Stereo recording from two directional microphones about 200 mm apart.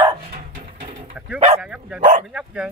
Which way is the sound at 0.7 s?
35° right (ahead or behind).